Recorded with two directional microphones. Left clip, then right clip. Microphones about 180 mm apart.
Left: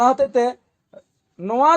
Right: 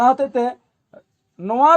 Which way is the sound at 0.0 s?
15° left (ahead or behind).